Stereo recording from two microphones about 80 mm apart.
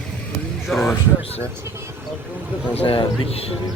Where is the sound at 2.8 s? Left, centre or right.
Left.